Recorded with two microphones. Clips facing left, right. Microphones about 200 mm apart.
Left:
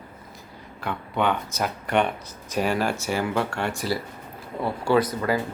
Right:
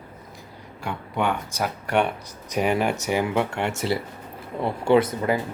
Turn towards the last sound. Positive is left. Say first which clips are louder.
# right 2 dB
turn(degrees=-20)  # may be behind; listen again after turning